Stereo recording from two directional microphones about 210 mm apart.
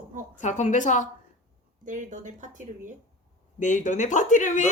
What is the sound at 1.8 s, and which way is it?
Speech, 35° right (ahead or behind).